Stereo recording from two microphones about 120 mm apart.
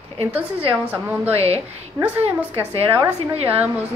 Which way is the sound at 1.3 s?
60° right (ahead or behind).